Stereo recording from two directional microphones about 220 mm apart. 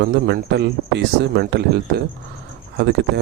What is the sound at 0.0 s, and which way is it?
A man's voice, 50° right (ahead or behind).